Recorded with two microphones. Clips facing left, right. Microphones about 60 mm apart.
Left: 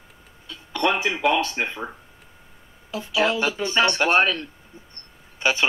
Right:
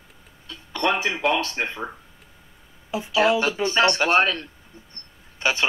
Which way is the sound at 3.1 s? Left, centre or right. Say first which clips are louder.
Right 3 dB; centre.